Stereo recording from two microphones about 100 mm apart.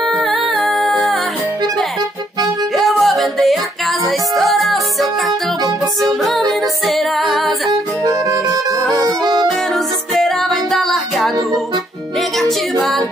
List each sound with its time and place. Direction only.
0.2 s music: centre (ahead or behind)
2.7 s music: centre (ahead or behind)
6.0 s music: centre (ahead or behind)
8.0 s music: 40° right (ahead or behind)
10.1 s music: centre (ahead or behind)